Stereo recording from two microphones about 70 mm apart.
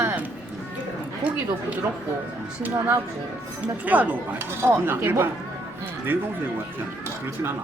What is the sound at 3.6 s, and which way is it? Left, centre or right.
Speech, right.